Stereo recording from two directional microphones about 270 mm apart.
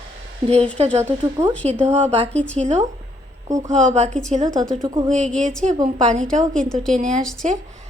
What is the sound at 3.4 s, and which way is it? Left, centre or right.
Speech, centre.